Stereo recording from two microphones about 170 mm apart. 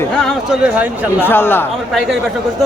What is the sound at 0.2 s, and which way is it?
Speech, centre (ahead or behind).